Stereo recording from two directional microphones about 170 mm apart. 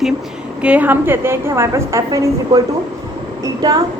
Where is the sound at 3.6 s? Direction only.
20° right (ahead or behind).